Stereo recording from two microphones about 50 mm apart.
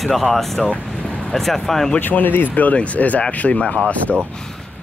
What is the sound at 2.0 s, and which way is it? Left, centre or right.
Speech, left.